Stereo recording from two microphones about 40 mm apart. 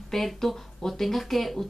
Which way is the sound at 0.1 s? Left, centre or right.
Centre.